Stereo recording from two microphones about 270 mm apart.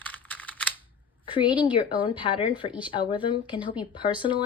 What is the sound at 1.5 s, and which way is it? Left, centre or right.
Speech, centre.